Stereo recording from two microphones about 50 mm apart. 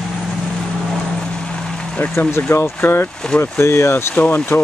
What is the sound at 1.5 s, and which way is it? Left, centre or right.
Vehicle, left.